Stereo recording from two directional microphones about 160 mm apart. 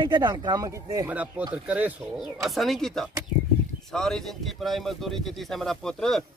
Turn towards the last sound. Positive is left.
turn(degrees=5)  # may be behind; listen again after turning